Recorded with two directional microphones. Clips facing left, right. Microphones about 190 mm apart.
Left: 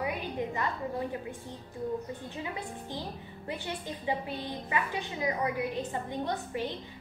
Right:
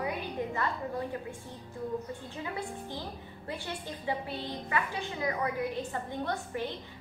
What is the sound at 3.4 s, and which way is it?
A woman's voice, 15° left (ahead or behind).